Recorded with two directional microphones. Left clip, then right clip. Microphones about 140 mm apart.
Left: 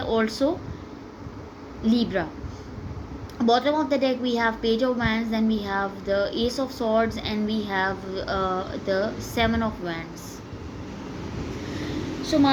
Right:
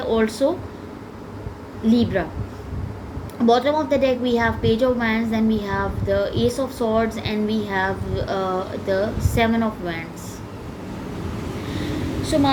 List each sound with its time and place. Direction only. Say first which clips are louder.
0.0 s a woman's voice: right 4 dB; 40° left (ahead or behind)
1.9 s a woman's voice: right 4 dB; 45° left (ahead or behind)
3.4 s a woman's voice: right 3 dB; 40° left (ahead or behind)
12.2 s a sound: right 1 dB; 55° left (ahead or behind)